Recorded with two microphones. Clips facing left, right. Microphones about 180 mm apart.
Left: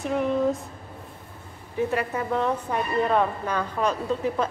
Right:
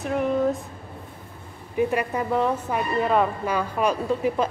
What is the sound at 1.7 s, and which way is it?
Speech, 15° right (ahead or behind).